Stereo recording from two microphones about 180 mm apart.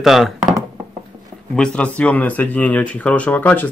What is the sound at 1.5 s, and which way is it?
Speech, 5° left (ahead or behind).